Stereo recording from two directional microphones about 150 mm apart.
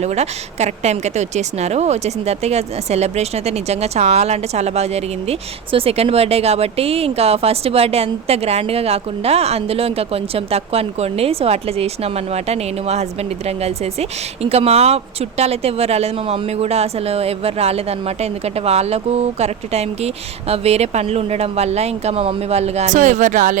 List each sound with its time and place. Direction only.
0.0 s speech: 45° right (ahead or behind)